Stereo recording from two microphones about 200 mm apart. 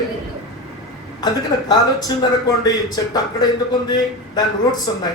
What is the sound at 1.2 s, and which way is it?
A man's voice, 20° left (ahead or behind).